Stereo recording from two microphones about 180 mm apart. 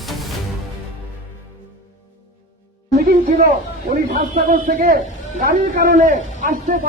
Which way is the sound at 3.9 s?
50° right (ahead or behind).